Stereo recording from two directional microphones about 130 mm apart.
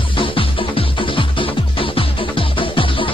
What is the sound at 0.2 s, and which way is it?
Music, 45° left (ahead or behind).